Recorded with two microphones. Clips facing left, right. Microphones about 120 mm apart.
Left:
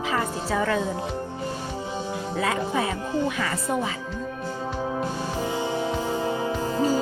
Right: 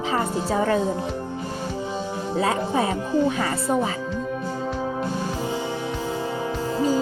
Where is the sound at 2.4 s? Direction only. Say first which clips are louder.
Right 3 dB; 30° right (ahead or behind).